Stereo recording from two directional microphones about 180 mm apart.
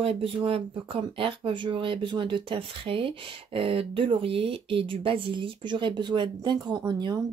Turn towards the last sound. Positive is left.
turn(degrees=-25)  # may be behind; listen again after turning